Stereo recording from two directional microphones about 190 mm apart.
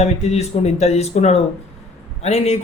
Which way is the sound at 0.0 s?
35° left (ahead or behind).